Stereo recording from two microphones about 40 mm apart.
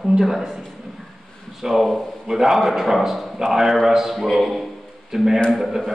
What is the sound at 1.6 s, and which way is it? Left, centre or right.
A man's voice, centre.